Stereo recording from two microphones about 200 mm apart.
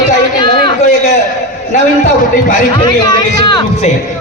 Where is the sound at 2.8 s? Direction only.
20° left (ahead or behind).